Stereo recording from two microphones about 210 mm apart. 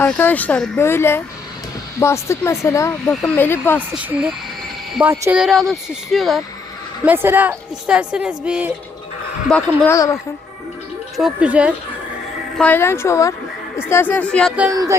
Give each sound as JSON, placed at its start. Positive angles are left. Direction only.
{"t": 0.0, "sound": "speech", "side_deg": 10}
{"t": 3.9, "sound": "a woman's voice", "side_deg": -5}
{"t": 11.2, "sound": "speech", "side_deg": -5}
{"t": 12.5, "sound": "speech", "side_deg": 10}
{"t": 14.7, "sound": "a woman's voice", "side_deg": -15}